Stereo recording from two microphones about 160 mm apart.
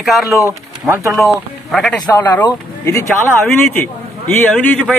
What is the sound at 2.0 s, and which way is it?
Speech, 15° left (ahead or behind).